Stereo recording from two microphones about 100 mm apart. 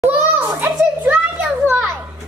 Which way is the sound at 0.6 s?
15° right (ahead or behind).